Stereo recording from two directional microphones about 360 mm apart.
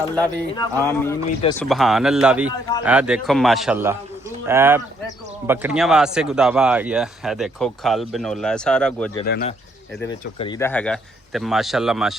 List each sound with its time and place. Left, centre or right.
0.2 s a man's voice: centre
9.2 s speech: left
10.0 s speech: centre